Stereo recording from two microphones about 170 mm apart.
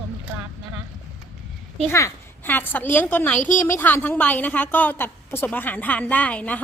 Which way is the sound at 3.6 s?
10° left (ahead or behind).